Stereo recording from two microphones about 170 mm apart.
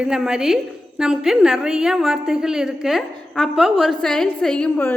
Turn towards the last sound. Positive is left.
turn(degrees=10)  # may be behind; listen again after turning